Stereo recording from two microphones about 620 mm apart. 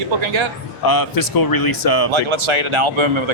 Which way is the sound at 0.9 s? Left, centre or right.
Left.